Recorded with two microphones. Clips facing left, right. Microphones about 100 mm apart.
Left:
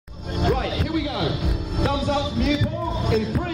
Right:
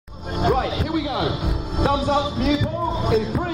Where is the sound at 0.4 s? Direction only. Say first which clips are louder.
Right 3 dB; 20° right (ahead or behind).